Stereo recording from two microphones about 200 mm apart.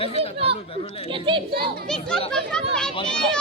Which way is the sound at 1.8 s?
5° left (ahead or behind).